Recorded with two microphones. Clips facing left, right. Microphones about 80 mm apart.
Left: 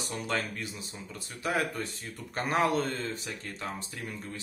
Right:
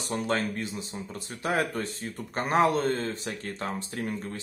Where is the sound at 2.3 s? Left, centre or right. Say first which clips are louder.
Right 4 dB; right.